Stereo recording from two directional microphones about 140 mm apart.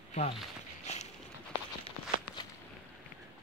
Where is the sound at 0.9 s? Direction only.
50° left (ahead or behind).